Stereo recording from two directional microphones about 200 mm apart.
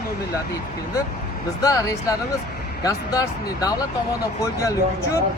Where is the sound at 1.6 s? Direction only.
15° left (ahead or behind).